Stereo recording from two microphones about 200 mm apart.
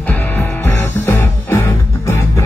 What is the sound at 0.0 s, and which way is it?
Music, 10° left (ahead or behind).